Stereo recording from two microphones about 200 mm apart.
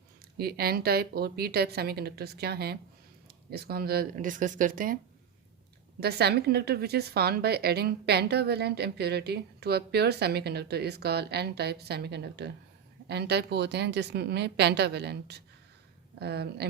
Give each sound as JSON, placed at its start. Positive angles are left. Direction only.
{"t": 0.3, "sound": "speech", "side_deg": -50}
{"t": 6.0, "sound": "a woman's voice", "side_deg": -55}